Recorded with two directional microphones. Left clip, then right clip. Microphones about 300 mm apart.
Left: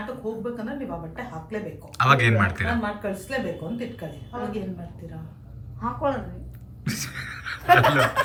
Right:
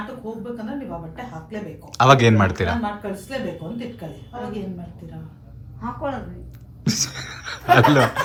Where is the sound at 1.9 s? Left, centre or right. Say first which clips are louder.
Right 5 dB; centre.